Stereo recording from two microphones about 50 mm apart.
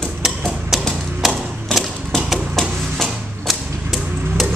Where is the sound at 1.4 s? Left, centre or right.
Centre.